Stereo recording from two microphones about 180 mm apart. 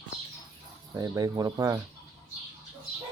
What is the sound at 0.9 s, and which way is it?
Speech, 20° right (ahead or behind).